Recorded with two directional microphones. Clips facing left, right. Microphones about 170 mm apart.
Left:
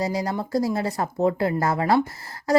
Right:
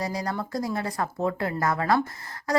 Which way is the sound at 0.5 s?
25° left (ahead or behind).